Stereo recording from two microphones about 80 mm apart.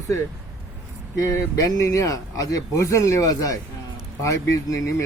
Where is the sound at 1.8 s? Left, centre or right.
Left.